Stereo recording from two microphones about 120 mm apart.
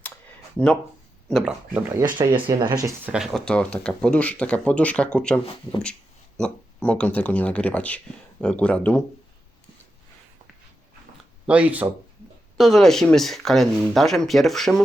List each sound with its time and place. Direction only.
1.3 s speech: centre (ahead or behind)
1.7 s speech: 20° right (ahead or behind)
2.1 s speech: 40° right (ahead or behind)
2.6 s speech: 25° right (ahead or behind)
3.1 s speech: 5° right (ahead or behind)
3.4 s speech: 10° left (ahead or behind)
6.4 s speech: 10° left (ahead or behind)
11.4 s speech: 10° right (ahead or behind)
12.5 s speech: centre (ahead or behind)